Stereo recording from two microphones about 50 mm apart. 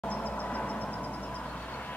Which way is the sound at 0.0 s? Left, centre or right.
Left.